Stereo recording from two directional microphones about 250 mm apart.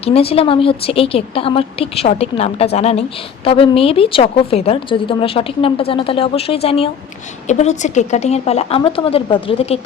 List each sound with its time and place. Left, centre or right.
0.0 s a woman's voice: left